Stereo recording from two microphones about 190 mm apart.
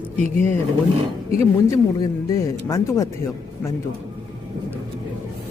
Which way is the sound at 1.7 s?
20° left (ahead or behind).